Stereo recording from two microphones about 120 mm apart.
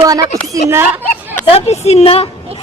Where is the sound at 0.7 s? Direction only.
20° right (ahead or behind).